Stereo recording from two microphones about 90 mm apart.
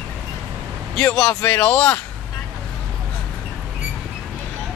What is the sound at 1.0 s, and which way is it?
Speech, 10° left (ahead or behind).